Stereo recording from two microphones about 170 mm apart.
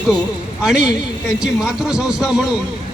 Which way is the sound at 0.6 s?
5° right (ahead or behind).